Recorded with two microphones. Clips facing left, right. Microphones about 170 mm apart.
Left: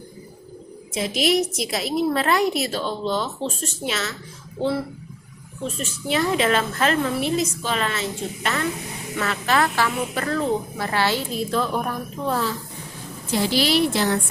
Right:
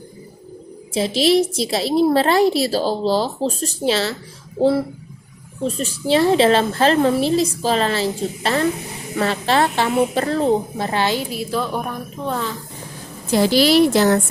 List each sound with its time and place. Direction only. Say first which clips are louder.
0.9 s a woman's voice: right 5 dB; 30° right (ahead or behind); by 12.5 s 5° left (ahead or behind)
13.3 s a woman's voice: right 6 dB; 40° right (ahead or behind)